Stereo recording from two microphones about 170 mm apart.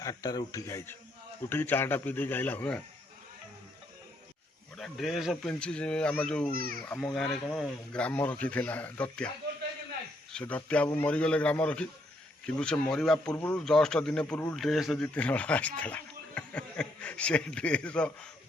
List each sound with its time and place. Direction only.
0.0 s speech: 20° left (ahead or behind)
4.8 s speech: centre (ahead or behind)
6.5 s a child's voice: 60° right (ahead or behind)
6.8 s speech: 5° left (ahead or behind)
10.3 s speech: 10° left (ahead or behind)